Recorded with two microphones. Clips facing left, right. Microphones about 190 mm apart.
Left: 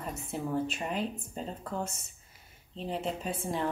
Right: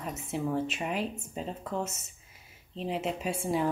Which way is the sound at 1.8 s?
30° left (ahead or behind).